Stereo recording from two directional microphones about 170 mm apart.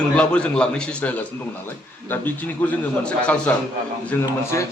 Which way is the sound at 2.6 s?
10° left (ahead or behind).